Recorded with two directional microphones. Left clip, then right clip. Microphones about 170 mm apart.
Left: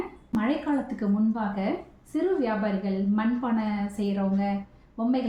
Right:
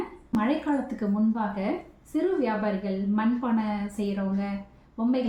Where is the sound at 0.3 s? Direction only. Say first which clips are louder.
Right 1 dB; centre (ahead or behind).